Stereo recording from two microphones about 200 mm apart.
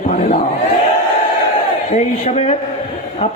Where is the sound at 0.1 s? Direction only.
35° left (ahead or behind).